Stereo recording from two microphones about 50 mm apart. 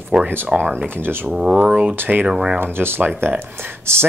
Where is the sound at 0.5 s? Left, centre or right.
Centre.